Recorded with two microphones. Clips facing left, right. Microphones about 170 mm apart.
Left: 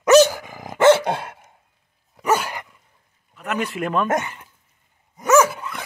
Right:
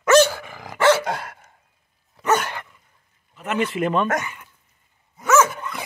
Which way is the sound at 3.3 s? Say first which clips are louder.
Right 2 dB; centre (ahead or behind).